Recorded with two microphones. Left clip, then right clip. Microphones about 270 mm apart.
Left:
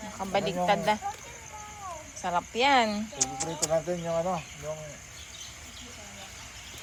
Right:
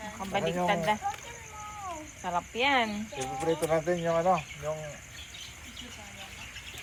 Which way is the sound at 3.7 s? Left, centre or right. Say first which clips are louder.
Right 1 dB; right.